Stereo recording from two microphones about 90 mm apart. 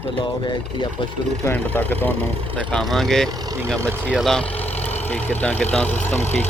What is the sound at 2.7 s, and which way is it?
Speech, 5° left (ahead or behind).